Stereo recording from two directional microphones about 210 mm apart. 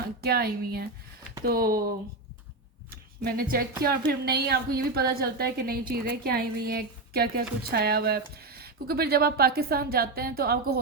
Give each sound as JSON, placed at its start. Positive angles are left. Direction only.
{"t": 0.2, "sound": "a woman's voice", "side_deg": -45}
{"t": 2.9, "sound": "a woman's voice", "side_deg": -45}